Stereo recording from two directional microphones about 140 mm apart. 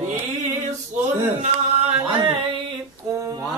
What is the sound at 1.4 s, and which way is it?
Singing, 50° right (ahead or behind).